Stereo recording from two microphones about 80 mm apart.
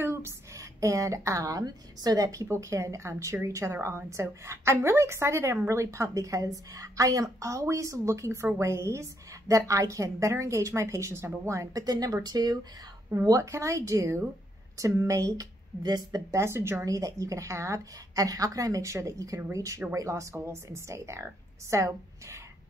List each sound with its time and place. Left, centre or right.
0.0 s a woman's voice: right
2.4 s a woman's voice: right
13.1 s a woman's voice: right
15.8 s speech: right
16.3 s a woman's voice: right
16.8 s a woman's voice: right